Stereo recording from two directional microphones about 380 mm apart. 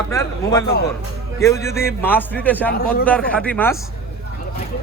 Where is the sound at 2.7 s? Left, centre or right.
Left.